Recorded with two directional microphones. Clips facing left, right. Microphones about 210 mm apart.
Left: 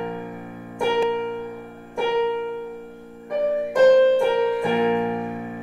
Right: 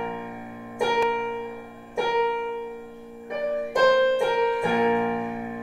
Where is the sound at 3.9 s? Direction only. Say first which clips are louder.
Left 5 dB; 20° left (ahead or behind).